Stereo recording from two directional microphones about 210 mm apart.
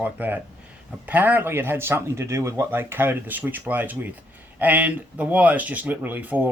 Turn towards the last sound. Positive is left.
turn(degrees=-10)  # may be behind; listen again after turning